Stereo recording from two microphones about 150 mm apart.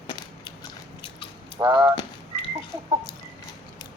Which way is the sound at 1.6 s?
20° right (ahead or behind).